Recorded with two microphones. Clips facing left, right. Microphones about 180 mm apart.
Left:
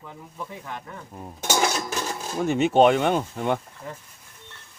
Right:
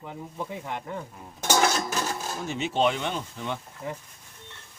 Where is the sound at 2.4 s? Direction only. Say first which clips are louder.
Left 8 dB; 55° left (ahead or behind).